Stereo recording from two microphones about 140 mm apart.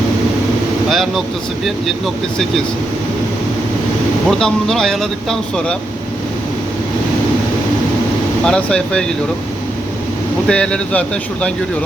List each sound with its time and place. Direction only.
0.9 s speech: centre (ahead or behind)
4.3 s speech: 5° left (ahead or behind)
8.4 s speech: 5° left (ahead or behind)
10.5 s speech: 5° left (ahead or behind)